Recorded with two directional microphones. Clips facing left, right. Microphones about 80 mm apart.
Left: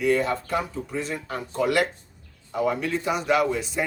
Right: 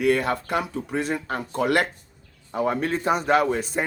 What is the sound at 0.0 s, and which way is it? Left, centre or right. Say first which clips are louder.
A man's voice: right 1 dB; right.